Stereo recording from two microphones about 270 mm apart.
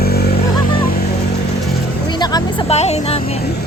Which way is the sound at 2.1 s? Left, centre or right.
Centre.